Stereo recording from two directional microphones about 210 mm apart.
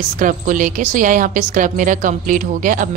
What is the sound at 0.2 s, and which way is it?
A woman's voice, 40° right (ahead or behind).